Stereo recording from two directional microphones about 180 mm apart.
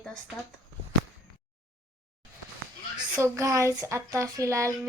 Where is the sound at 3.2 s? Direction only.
15° right (ahead or behind).